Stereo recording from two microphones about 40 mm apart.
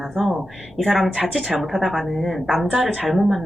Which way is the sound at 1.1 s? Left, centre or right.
Centre.